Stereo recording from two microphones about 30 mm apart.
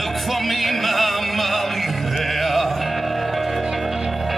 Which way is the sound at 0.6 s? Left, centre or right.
Centre.